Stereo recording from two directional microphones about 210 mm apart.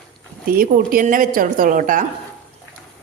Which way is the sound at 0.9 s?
40° right (ahead or behind).